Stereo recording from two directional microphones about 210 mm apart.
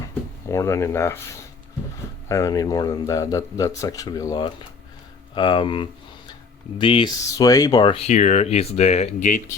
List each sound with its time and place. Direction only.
0.4 s speech: 15° left (ahead or behind)
2.3 s speech: 15° left (ahead or behind); by 9.4 s 35° left (ahead or behind)